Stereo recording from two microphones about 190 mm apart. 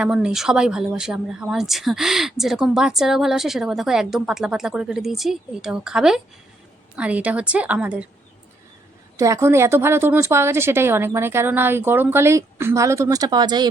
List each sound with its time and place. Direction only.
0.0 s a woman's voice: 5° right (ahead or behind)
9.1 s a woman's voice: 15° right (ahead or behind)